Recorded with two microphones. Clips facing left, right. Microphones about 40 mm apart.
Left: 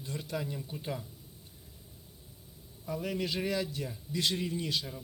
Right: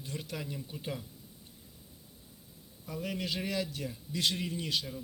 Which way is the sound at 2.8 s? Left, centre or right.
Centre.